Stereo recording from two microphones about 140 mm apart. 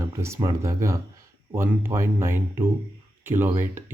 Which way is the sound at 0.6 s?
20° right (ahead or behind).